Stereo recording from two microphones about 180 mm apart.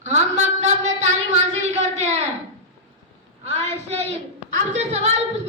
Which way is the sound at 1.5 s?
40° right (ahead or behind).